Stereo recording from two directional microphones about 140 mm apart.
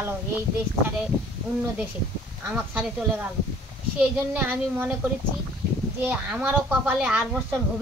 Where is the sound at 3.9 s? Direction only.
10° right (ahead or behind).